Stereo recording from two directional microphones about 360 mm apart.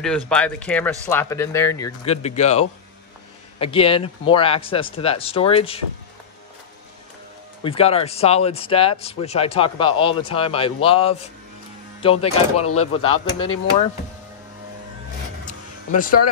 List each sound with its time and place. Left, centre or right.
0.3 s speech: centre
7.6 s speech: centre
15.4 s a sound: left